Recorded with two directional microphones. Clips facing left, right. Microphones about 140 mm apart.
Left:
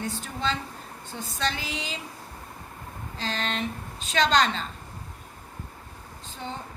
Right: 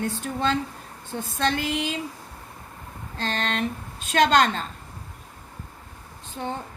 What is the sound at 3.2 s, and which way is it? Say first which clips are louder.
A woman's voice: right 3 dB; 60° right (ahead or behind).